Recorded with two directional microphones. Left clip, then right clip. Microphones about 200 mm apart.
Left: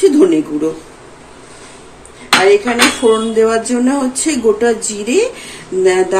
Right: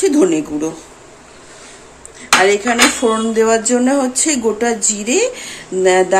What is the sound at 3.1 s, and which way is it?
Speech, 45° right (ahead or behind).